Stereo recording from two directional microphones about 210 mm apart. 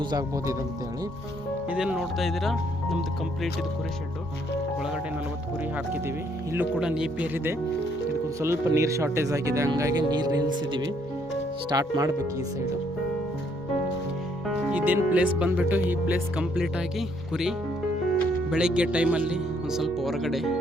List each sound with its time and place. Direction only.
0.1 s speech: 15° right (ahead or behind)
1.7 s speech: 5° right (ahead or behind)
6.5 s speech: 5° right (ahead or behind)
14.4 s speech: 5° right (ahead or behind)
18.5 s speech: 5° right (ahead or behind)